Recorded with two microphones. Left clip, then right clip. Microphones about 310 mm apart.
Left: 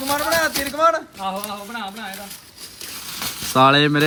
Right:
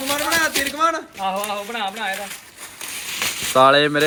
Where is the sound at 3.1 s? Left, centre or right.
Centre.